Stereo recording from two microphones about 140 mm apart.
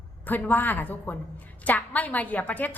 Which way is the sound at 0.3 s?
15° left (ahead or behind).